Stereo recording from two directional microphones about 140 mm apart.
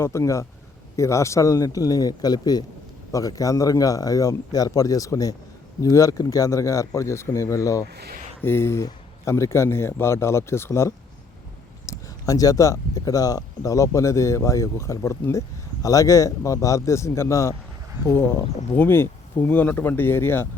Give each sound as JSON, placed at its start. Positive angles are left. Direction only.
{"t": 0.0, "sound": "speech", "side_deg": 20}
{"t": 18.8, "sound": "speech", "side_deg": 15}